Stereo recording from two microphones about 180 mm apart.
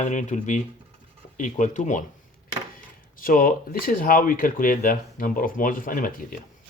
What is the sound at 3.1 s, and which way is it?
Speech, 50° left (ahead or behind).